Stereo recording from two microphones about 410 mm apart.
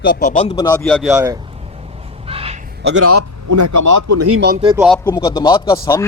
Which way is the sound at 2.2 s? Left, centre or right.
Centre.